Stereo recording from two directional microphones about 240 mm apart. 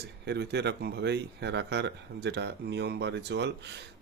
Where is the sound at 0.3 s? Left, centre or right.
Right.